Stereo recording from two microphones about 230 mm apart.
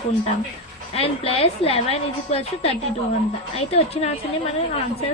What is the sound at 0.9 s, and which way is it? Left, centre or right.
A woman's voice, left.